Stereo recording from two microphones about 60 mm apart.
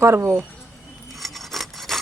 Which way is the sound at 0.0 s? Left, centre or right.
Right.